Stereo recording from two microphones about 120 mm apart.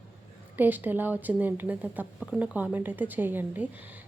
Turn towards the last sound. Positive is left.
turn(degrees=-15)  # may be behind; listen again after turning